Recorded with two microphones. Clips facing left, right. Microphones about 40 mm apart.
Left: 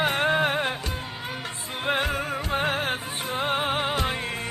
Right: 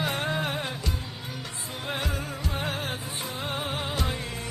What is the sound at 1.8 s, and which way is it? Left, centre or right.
Music, left.